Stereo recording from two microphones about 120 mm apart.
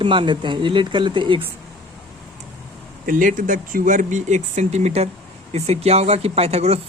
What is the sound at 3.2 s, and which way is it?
Speech, 90° right.